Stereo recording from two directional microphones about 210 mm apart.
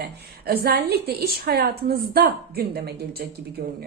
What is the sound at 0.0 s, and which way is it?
A woman's voice, 45° right (ahead or behind).